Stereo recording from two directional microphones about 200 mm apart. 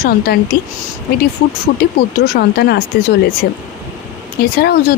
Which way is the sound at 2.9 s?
55° left (ahead or behind).